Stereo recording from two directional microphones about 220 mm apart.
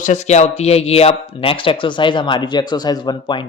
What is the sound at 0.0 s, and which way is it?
A man's voice, 35° left (ahead or behind).